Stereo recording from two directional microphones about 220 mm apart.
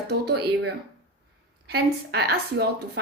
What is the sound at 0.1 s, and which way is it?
Speech, 50° right (ahead or behind).